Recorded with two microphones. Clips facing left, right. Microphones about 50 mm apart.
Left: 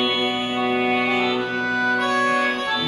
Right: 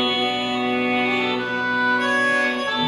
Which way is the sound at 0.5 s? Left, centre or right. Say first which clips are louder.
Left 3 dB; left.